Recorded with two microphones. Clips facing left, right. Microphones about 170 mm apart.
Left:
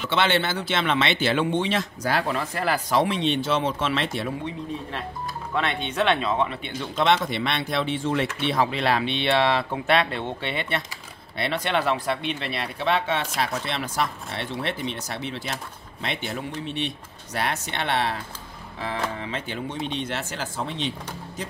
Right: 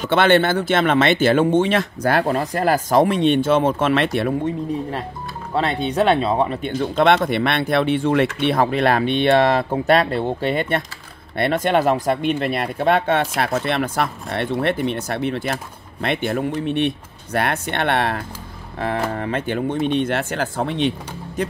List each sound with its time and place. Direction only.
0.0 s speech: 50° right (ahead or behind)
5.5 s speech: 35° right (ahead or behind); by 21.5 s 60° right (ahead or behind)